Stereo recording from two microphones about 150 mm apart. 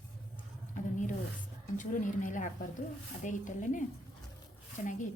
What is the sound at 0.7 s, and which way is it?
A woman's voice, 55° left (ahead or behind).